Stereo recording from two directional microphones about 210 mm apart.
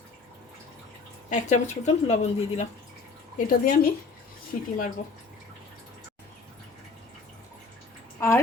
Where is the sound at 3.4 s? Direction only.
45° left (ahead or behind).